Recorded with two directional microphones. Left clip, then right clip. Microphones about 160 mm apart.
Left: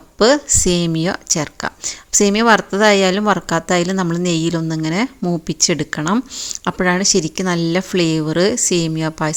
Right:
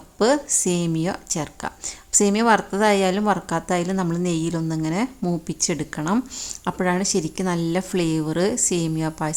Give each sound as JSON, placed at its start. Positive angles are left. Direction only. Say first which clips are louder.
{"t": 0.2, "sound": "speech", "louder": "left 6 dB", "side_deg": 20}
{"t": 6.1, "sound": "speech", "louder": "left 4 dB", "side_deg": 5}
{"t": 6.7, "sound": "speech", "louder": "left 7 dB", "side_deg": 20}